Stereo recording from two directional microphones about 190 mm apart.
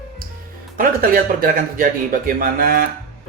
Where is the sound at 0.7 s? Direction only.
50° right (ahead or behind).